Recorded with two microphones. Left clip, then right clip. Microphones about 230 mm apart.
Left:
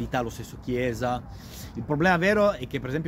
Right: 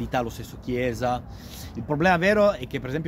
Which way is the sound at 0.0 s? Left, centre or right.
Centre.